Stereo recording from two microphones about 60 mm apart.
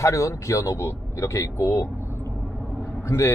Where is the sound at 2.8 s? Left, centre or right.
Left.